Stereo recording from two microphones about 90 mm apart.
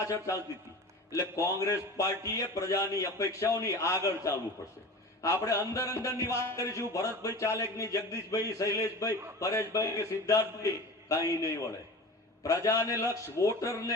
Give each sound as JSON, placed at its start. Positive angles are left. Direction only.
{"t": 0.0, "sound": "a man's voice", "side_deg": 35}